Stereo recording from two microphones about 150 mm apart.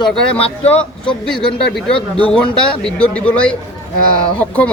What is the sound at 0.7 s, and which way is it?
A man's voice, 5° left (ahead or behind).